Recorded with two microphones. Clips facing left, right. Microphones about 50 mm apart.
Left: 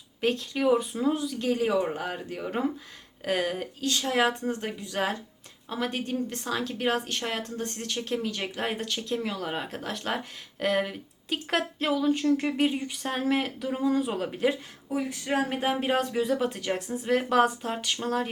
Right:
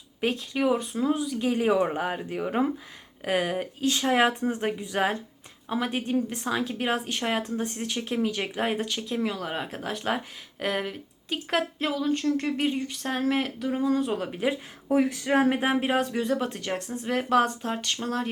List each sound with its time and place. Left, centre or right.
0.2 s a woman's voice: centre
15.2 s speech: right
15.4 s speech: centre